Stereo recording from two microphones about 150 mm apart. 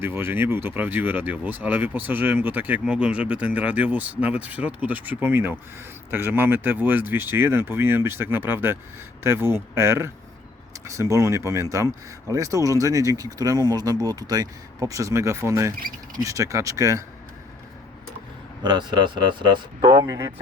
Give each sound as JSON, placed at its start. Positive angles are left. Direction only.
{"t": 0.0, "sound": "speech", "side_deg": -15}
{"t": 18.6, "sound": "speech", "side_deg": -30}